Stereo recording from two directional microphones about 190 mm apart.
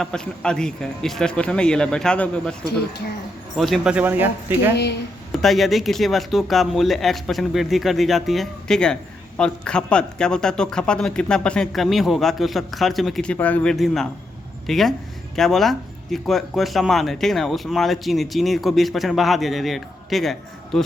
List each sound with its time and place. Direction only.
0.0 s speech: 5° left (ahead or behind)
3.6 s speech: centre (ahead or behind)
4.7 s speech: 60° left (ahead or behind)
5.3 s speech: centre (ahead or behind)